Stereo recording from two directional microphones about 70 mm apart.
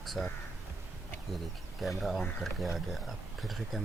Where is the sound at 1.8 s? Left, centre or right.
Centre.